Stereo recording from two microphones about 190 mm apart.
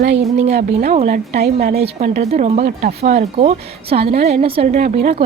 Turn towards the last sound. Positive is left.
turn(degrees=-35)  # may be behind; listen again after turning